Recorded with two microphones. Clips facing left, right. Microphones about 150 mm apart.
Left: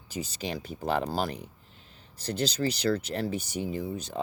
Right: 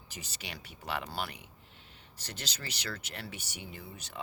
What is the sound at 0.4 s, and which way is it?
Speech, 35° left (ahead or behind).